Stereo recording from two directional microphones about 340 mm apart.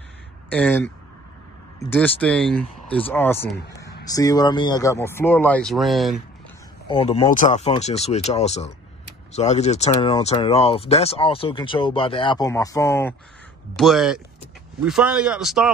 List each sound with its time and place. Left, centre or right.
0.5 s speech: centre
1.9 s speech: centre
6.9 s speech: centre